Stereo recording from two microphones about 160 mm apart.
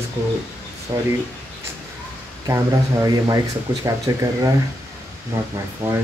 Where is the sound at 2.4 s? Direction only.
20° right (ahead or behind).